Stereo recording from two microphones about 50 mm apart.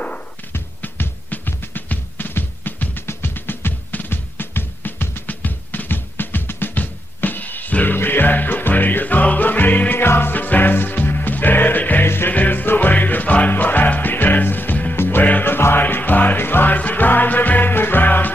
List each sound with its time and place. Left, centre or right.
0.5 s music: left
10.0 s music: left
15.4 s music: left